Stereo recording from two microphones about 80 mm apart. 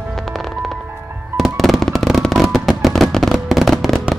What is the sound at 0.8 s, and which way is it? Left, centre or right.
Music, right.